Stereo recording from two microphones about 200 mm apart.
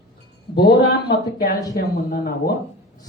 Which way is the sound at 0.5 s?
50° left (ahead or behind).